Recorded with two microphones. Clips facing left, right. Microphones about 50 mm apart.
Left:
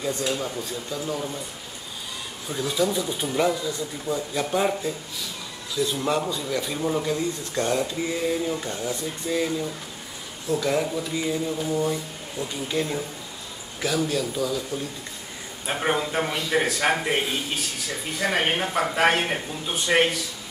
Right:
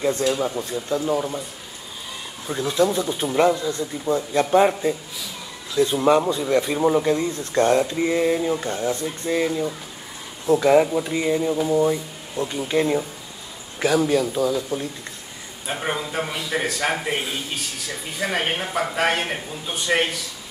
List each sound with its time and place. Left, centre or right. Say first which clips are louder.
0.4 s speech: right 5 dB; centre
2.4 s speech: right 4 dB; centre
15.6 s a man's voice: left 2 dB; centre